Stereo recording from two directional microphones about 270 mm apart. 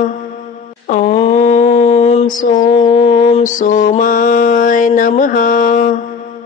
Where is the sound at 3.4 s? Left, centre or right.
Left.